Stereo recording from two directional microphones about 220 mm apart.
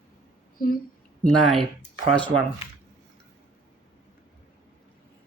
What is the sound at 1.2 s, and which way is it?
Speech, centre (ahead or behind).